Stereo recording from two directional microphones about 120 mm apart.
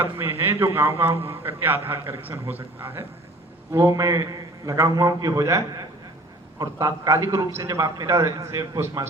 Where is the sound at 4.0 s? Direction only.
30° right (ahead or behind).